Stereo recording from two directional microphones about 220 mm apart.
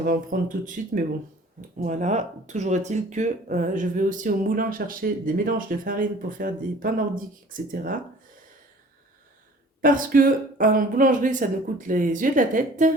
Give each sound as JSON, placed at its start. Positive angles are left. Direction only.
{"t": 0.0, "sound": "speech", "side_deg": -40}
{"t": 9.8, "sound": "speech", "side_deg": -40}